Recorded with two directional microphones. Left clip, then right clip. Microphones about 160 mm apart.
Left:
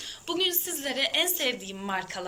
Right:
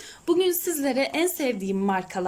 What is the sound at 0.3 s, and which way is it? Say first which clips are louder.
A woman's voice: right 6 dB; 90° right.